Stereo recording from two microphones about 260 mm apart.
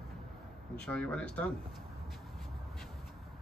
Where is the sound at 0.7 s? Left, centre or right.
Centre.